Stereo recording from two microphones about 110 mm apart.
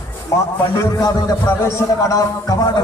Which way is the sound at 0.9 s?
35° left (ahead or behind).